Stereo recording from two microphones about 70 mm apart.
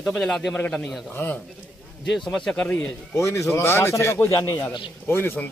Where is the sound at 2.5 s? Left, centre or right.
Left.